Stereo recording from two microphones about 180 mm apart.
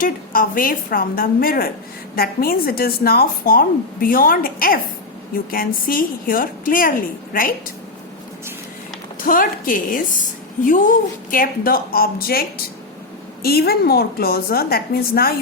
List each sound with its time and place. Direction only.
0.0 s a woman's voice: 50° left (ahead or behind)
9.2 s a woman's voice: 50° left (ahead or behind)